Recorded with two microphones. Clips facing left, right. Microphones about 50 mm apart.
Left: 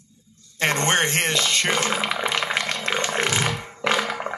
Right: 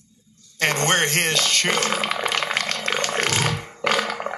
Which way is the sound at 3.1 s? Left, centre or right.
Centre.